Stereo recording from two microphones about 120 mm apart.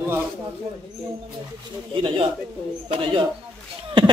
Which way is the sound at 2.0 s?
45° right (ahead or behind).